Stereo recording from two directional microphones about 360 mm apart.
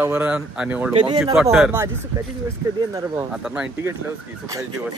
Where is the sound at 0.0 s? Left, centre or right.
Centre.